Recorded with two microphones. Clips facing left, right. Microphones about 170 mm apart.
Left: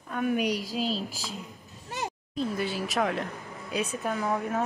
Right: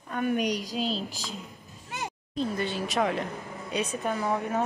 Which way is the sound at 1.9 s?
35° left (ahead or behind).